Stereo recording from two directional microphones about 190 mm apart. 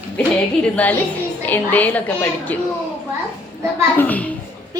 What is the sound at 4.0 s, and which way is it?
Speech, 10° left (ahead or behind).